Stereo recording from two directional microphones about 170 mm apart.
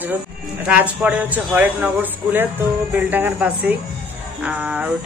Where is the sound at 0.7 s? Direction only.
10° right (ahead or behind).